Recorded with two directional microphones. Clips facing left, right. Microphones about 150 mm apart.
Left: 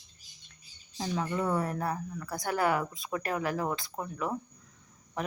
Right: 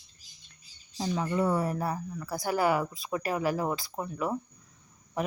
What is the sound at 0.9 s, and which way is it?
Speech, 5° right (ahead or behind).